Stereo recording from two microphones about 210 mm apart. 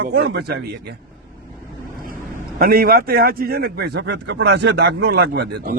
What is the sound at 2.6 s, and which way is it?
Speech, 45° right (ahead or behind).